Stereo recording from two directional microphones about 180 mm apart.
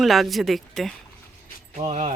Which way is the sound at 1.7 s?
35° right (ahead or behind).